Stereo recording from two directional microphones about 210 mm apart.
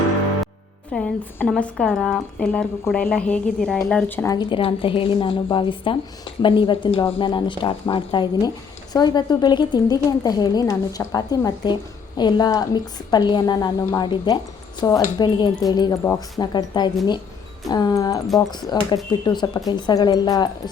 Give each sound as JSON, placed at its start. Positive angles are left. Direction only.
{"t": 0.9, "sound": "speech", "side_deg": 5}
{"t": 4.4, "sound": "a woman's voice", "side_deg": 25}